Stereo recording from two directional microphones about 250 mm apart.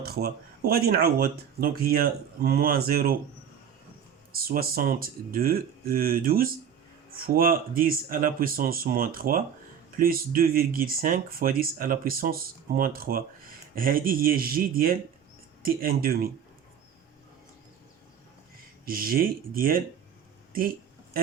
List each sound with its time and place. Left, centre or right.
0.0 s speech: right
4.3 s speech: right
18.9 s speech: right
20.5 s a sound: right